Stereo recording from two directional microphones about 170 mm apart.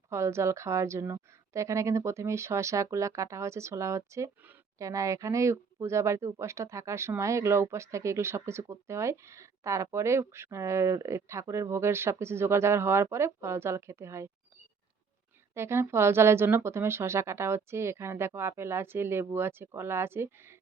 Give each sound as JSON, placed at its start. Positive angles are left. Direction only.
{"t": 0.1, "sound": "a woman's voice", "side_deg": -15}
{"t": 15.5, "sound": "a woman's voice", "side_deg": -15}